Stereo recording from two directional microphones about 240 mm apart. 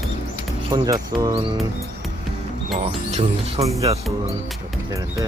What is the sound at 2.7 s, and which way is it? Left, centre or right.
Speech, right.